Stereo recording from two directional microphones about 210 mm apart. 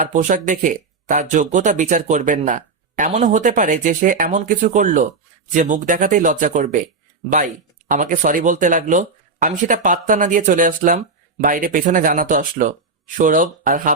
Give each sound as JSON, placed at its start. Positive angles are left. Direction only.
{"t": 0.0, "sound": "speech", "side_deg": -35}